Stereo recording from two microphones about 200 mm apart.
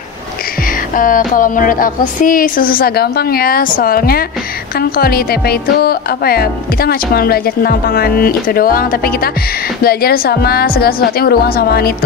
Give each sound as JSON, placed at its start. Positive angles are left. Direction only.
{"t": 0.9, "sound": "speech", "side_deg": 40}